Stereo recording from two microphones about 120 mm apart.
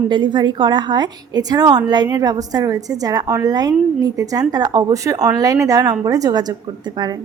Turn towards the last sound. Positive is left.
turn(degrees=-35)  # may be behind; listen again after turning